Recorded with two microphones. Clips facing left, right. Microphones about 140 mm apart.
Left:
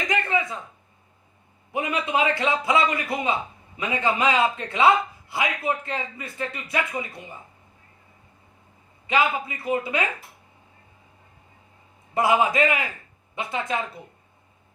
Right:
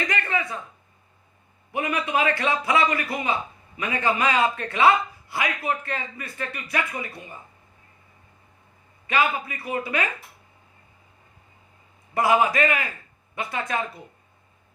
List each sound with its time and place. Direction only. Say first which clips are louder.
0.1 s a sound: left 2 dB; 15° left (ahead or behind)
1.7 s a man's voice: even; 20° left (ahead or behind)
9.0 s a man's voice: left 1 dB; 20° left (ahead or behind)
12.1 s a man's voice: even; 20° left (ahead or behind)